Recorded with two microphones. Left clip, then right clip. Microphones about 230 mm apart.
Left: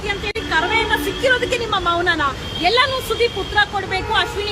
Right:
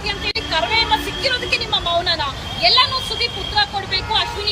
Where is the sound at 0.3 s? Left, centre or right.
Centre.